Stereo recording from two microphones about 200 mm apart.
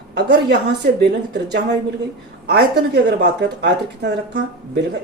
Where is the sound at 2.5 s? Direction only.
50° right (ahead or behind).